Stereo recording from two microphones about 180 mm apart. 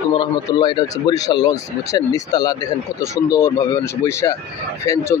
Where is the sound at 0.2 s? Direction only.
25° left (ahead or behind).